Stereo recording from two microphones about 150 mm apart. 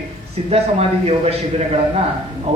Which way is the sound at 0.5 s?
40° right (ahead or behind).